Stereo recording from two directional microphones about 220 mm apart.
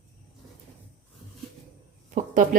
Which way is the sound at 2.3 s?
35° right (ahead or behind).